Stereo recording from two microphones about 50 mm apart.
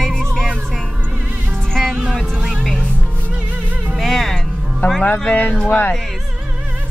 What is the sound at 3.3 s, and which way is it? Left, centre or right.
Music, right.